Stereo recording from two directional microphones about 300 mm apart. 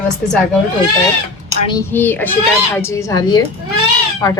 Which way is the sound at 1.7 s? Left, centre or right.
Centre.